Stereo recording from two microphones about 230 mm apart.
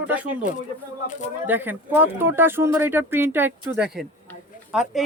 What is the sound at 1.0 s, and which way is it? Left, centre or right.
Speech, left.